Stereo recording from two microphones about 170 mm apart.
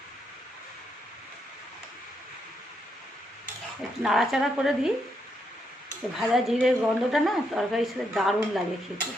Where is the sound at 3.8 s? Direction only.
Centre (ahead or behind).